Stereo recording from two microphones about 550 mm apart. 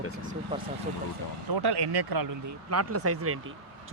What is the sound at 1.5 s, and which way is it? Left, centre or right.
Speech, right.